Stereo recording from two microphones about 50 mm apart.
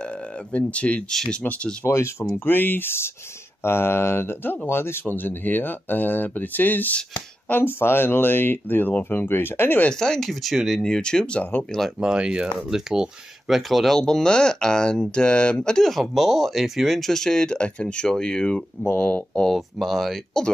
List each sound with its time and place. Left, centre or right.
0.0 s speech: left
1.9 s speech: left
2.3 s speech: left
9.8 s speech: centre
10.4 s speech: centre
10.8 s speech: centre
12.0 s speech: centre
13.9 s speech: centre
15.8 s speech: centre
17.1 s speech: centre; by 19.4 s left
19.5 s speech: centre